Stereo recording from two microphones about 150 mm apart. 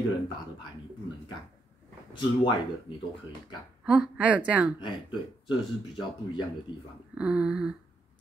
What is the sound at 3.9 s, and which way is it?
Speech, 10° right (ahead or behind).